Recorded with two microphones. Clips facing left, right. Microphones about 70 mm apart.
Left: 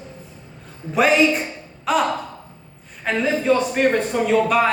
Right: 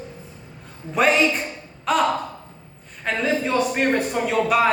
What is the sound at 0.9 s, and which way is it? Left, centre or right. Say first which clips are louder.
Speech: left 2 dB; centre.